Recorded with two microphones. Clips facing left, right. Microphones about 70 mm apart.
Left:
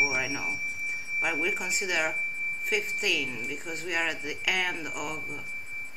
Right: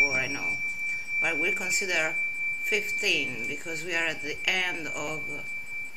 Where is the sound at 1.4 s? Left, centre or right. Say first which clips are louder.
Right 1 dB; centre.